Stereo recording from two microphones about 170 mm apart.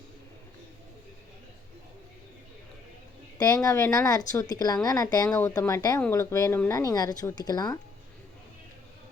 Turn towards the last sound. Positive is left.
turn(degrees=25)  # may be behind; listen again after turning